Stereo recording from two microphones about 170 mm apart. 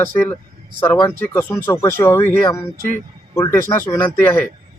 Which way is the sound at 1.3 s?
10° left (ahead or behind).